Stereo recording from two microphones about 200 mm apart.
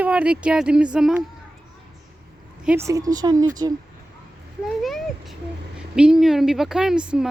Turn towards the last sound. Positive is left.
turn(degrees=-5)  # may be behind; listen again after turning